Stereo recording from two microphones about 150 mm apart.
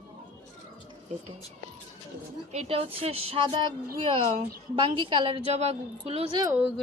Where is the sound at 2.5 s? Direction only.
45° right (ahead or behind).